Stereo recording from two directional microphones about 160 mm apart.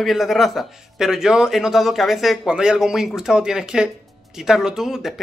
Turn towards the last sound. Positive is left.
turn(degrees=-5)  # may be behind; listen again after turning